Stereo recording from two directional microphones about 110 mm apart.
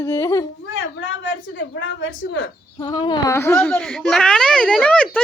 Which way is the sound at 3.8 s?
5° left (ahead or behind).